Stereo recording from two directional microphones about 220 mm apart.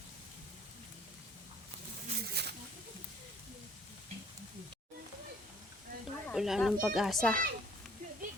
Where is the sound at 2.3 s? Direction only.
50° right (ahead or behind).